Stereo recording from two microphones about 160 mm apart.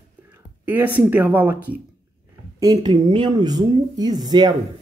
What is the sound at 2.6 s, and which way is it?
Speech, 25° right (ahead or behind).